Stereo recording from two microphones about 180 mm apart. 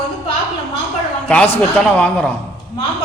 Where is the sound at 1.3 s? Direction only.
5° left (ahead or behind).